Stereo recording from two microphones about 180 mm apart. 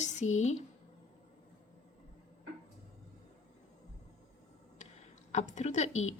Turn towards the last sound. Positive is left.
turn(degrees=40)  # may be behind; listen again after turning